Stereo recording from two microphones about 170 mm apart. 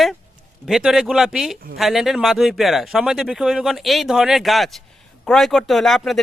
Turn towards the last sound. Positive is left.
turn(degrees=5)  # may be behind; listen again after turning